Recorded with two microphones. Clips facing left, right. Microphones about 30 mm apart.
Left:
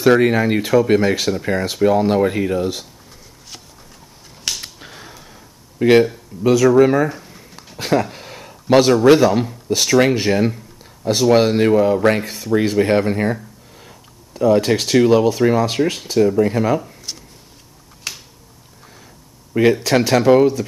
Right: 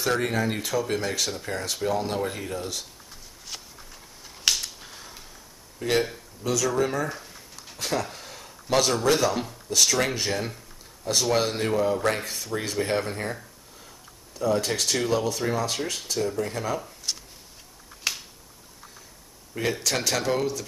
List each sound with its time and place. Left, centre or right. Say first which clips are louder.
0.0 s speech: left 11 dB; left
4.6 s finger snapping: left 2 dB; left
5.8 s speech: left 12 dB; left
6.4 s speech: left 13 dB; left
7.1 s a sound: left 6 dB; centre
7.7 s a sound: left 10 dB; left
9.2 s speech: left 10 dB; centre
12.2 s speech: left 10 dB; centre
12.5 s speech: left 11 dB; left
18.1 s finger snapping: even; centre
19.8 s speech: left 11 dB; left